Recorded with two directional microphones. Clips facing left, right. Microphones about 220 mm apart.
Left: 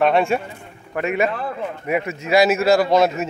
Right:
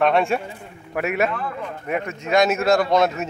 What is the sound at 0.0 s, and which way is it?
A man's voice, centre (ahead or behind).